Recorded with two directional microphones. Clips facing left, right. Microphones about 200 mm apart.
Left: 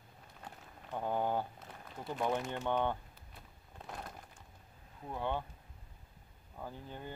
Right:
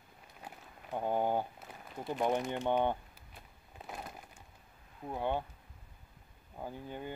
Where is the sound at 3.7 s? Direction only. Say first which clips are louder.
Right 1 dB; 5° right (ahead or behind).